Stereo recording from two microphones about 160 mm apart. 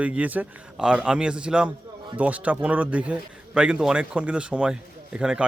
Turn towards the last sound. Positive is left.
turn(degrees=-5)  # may be behind; listen again after turning